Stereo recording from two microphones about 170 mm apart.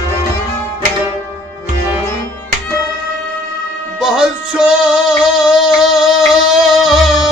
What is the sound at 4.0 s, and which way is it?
Music, 5° right (ahead or behind).